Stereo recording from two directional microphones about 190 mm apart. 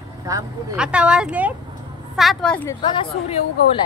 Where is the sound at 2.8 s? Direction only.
25° left (ahead or behind).